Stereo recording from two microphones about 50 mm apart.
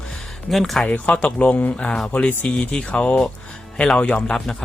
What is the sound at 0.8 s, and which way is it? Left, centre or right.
Speech, left.